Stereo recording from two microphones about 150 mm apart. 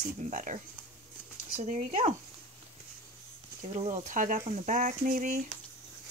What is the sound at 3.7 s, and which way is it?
Speech, 50° right (ahead or behind).